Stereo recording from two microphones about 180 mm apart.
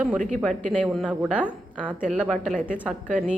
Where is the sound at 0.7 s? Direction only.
5° left (ahead or behind).